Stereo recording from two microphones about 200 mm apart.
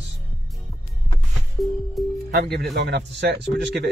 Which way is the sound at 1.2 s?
Centre (ahead or behind).